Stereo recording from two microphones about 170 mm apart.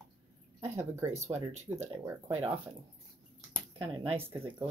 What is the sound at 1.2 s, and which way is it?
Speech, 40° right (ahead or behind).